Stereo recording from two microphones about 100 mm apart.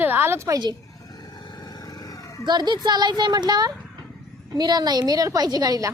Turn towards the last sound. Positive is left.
turn(degrees=-40)  # may be behind; listen again after turning